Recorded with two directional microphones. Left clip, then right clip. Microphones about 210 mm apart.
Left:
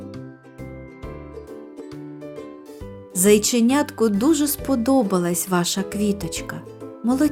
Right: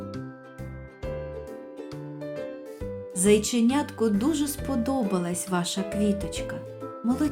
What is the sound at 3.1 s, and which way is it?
Speech, 45° left (ahead or behind).